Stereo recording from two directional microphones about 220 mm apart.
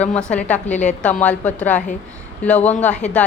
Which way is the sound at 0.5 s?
35° left (ahead or behind).